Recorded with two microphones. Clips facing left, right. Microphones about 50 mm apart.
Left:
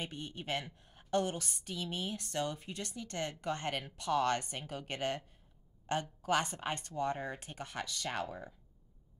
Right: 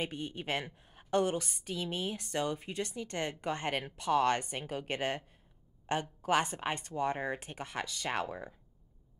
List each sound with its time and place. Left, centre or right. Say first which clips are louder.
0.0 s a woman's voice: right 5 dB; right